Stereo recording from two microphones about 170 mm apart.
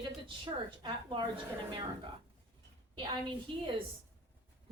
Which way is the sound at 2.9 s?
30° right (ahead or behind).